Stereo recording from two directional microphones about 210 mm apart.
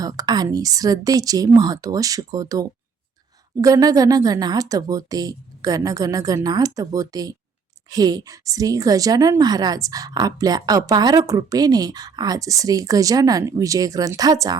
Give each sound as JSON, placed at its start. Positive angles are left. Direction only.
{"t": 0.0, "sound": "a woman's voice", "side_deg": -15}